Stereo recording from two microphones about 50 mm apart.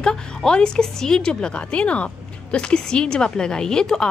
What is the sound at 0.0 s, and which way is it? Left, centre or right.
A woman's voice, centre.